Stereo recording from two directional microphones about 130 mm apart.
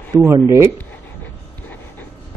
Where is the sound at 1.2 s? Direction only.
15° left (ahead or behind).